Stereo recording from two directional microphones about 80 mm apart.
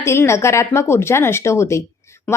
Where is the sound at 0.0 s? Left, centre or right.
Left.